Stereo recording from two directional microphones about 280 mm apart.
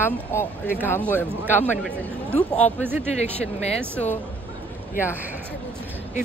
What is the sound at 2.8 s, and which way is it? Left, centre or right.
Speech, centre.